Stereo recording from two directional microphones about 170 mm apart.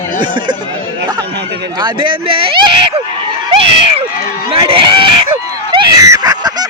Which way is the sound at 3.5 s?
35° right (ahead or behind).